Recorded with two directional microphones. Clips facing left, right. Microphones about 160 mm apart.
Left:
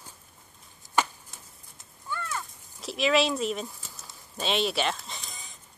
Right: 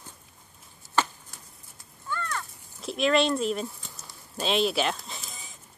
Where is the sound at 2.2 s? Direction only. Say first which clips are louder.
Right 1 dB; 5° left (ahead or behind).